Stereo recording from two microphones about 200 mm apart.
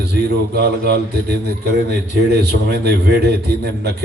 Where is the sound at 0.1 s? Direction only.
55° right (ahead or behind).